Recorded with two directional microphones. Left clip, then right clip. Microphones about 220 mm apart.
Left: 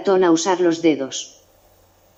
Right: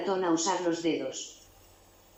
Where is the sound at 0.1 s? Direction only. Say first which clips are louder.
Left 13 dB; 50° left (ahead or behind).